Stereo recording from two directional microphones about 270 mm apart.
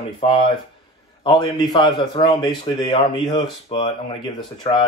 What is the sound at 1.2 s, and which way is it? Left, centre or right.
A man's voice, centre.